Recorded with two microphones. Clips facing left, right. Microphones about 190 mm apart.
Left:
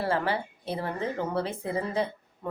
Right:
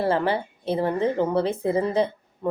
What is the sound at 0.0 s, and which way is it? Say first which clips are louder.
A woman's voice: right 5 dB; 25° right (ahead or behind).